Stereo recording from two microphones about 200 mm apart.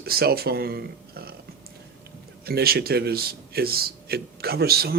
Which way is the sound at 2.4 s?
50° right (ahead or behind).